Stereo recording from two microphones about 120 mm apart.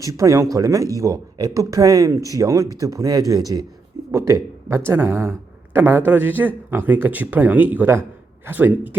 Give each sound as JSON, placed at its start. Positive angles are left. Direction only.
{"t": 0.0, "sound": "speech", "side_deg": -25}